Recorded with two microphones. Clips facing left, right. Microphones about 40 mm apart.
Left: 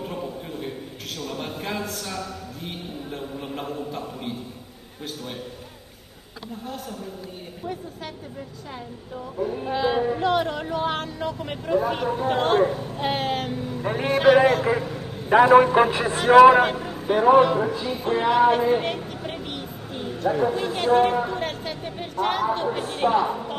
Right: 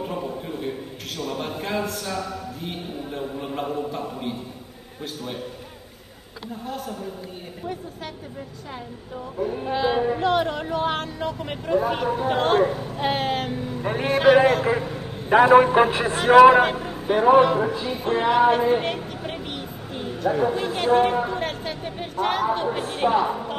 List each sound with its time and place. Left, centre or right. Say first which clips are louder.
0.0 s a sound: right 3 dB; centre
5.0 s speech: right 2 dB; centre
6.4 s speech: right 3 dB; centre
9.4 s speech: right 1 dB; centre
14.7 s a man's voice: even; centre
16.7 s vehicle: even; centre
17.4 s speech: right 1 dB; centre
20.3 s speech: even; centre